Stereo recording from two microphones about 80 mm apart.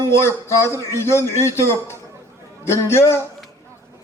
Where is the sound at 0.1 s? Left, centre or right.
Left.